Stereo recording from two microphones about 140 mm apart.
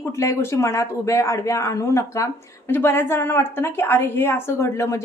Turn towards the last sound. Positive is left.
turn(degrees=20)  # may be behind; listen again after turning